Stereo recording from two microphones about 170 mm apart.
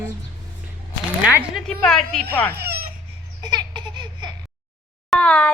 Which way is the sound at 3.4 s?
25° right (ahead or behind).